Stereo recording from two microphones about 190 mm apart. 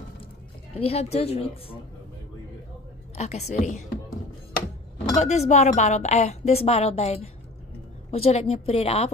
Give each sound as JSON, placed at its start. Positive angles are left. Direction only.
{"t": 0.7, "sound": "a woman's voice", "side_deg": 30}
{"t": 3.2, "sound": "a woman's voice", "side_deg": 35}
{"t": 5.1, "sound": "a woman's voice", "side_deg": 35}